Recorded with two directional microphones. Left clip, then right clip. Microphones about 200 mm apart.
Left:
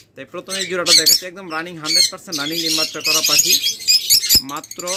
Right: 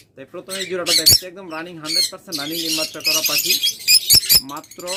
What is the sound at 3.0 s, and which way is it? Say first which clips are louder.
Bird: left 3 dB; 15° left (ahead or behind).